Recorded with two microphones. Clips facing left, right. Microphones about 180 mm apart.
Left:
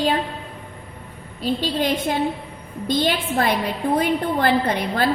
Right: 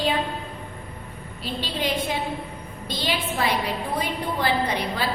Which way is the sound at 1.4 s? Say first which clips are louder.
Left 8 dB; 45° left (ahead or behind).